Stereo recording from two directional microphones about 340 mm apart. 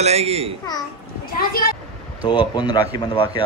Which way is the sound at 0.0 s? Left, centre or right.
Centre.